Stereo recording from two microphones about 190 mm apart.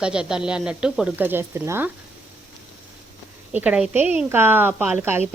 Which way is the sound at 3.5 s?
5° right (ahead or behind).